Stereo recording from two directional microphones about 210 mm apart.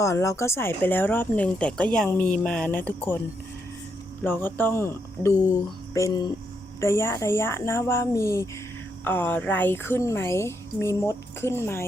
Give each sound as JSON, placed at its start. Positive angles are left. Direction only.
{"t": 0.0, "sound": "speech", "side_deg": 15}
{"t": 4.2, "sound": "speech", "side_deg": 10}